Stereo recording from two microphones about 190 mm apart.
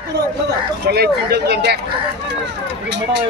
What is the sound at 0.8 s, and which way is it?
Speech, 55° right (ahead or behind).